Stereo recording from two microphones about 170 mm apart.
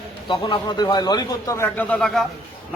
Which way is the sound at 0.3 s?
25° left (ahead or behind).